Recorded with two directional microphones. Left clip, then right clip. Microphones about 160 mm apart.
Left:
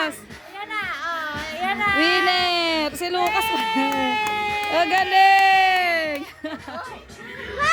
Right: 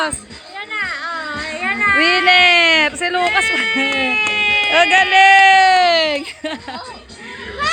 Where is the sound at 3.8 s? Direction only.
65° left (ahead or behind).